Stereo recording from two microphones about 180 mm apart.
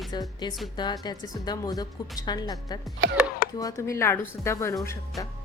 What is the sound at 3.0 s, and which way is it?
Speech, 75° right (ahead or behind).